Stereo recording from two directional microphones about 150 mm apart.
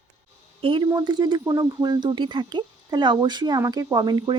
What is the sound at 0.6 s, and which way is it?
Speech, 35° right (ahead or behind).